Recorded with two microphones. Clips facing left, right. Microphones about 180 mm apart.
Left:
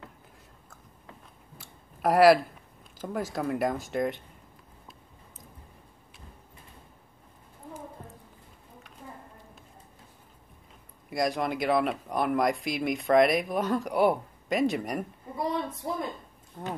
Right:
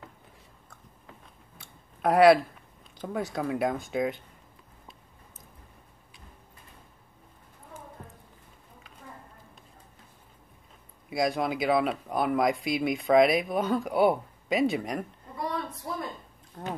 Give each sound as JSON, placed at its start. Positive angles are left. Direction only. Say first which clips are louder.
{"t": 1.6, "sound": "a sound", "louder": "even", "side_deg": 0}
{"t": 3.0, "sound": "speech", "louder": "even", "side_deg": 0}
{"t": 11.1, "sound": "speech", "louder": "right 1 dB", "side_deg": 0}
{"t": 15.3, "sound": "a woman's voice", "louder": "left 3 dB", "side_deg": 25}
{"t": 16.6, "sound": "speech", "louder": "even", "side_deg": 0}